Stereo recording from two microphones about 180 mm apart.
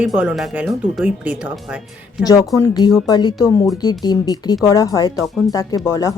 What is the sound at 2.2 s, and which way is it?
Speech, 20° left (ahead or behind).